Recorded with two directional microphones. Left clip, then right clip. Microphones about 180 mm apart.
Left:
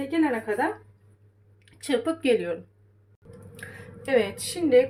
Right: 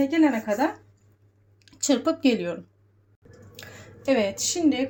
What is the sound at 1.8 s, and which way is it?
Speech, 30° right (ahead or behind).